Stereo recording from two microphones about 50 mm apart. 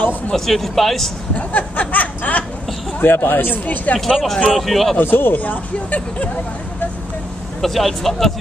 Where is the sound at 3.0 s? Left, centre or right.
Left.